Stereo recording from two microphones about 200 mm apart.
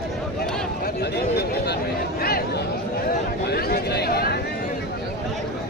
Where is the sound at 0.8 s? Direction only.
55° left (ahead or behind).